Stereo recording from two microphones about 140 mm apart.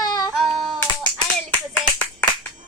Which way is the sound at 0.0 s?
25° left (ahead or behind).